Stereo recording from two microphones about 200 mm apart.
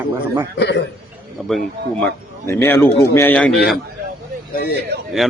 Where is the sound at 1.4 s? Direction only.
Centre (ahead or behind).